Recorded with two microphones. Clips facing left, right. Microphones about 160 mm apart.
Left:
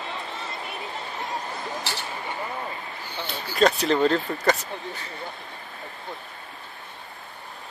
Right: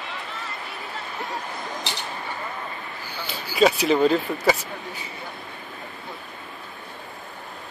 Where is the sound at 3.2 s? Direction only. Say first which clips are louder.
Right 2 dB; 5° right (ahead or behind).